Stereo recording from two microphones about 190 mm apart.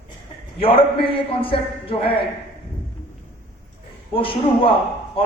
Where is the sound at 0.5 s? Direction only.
30° left (ahead or behind).